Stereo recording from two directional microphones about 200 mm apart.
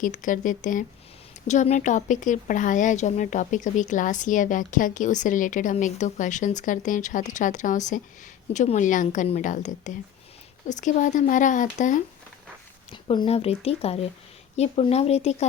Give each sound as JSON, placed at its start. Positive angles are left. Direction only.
{"t": 0.0, "sound": "speech", "side_deg": 40}
{"t": 12.9, "sound": "speech", "side_deg": 25}